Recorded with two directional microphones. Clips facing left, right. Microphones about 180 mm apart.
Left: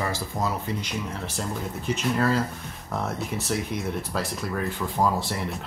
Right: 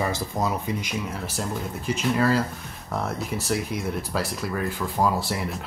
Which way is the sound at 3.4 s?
Centre (ahead or behind).